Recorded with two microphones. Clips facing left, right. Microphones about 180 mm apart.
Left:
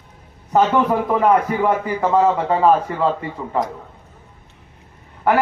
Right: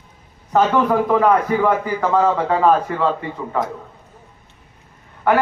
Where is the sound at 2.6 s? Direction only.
10° left (ahead or behind).